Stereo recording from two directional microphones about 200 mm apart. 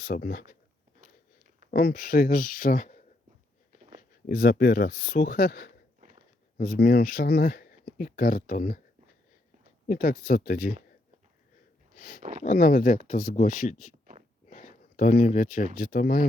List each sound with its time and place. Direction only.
0.0 s speech: 50° left (ahead or behind)
1.0 s biting: 45° right (ahead or behind)
1.7 s speech: 45° left (ahead or behind)
4.3 s speech: 50° left (ahead or behind)
6.0 s a sound: 40° right (ahead or behind)
6.6 s speech: 45° left (ahead or behind)
9.8 s speech: 45° left (ahead or behind)
11.9 s a sound: 50° left (ahead or behind)
12.4 s speech: 40° left (ahead or behind)